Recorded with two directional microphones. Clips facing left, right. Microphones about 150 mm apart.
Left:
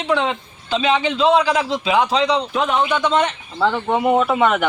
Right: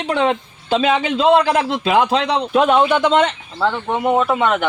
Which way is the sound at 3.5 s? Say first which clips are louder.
Left 2 dB; centre (ahead or behind).